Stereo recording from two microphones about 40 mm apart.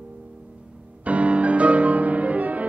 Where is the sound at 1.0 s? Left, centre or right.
Right.